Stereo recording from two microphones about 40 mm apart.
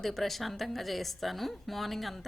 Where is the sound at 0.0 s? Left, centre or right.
Centre.